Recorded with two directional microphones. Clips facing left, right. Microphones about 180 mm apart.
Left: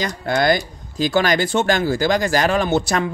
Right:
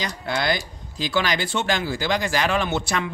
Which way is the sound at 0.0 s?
45° left (ahead or behind).